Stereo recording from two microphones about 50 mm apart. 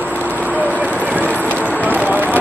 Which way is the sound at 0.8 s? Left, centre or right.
Right.